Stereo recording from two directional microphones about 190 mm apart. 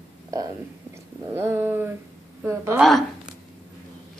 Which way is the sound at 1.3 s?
10° right (ahead or behind).